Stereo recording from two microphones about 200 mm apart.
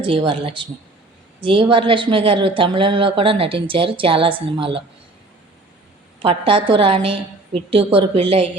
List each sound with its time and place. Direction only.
0.0 s speech: 25° right (ahead or behind)
6.2 s speech: 25° right (ahead or behind)